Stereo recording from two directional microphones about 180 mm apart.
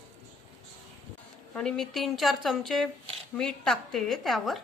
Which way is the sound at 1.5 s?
5° left (ahead or behind).